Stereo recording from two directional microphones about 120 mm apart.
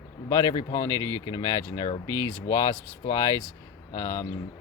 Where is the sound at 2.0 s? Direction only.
30° right (ahead or behind).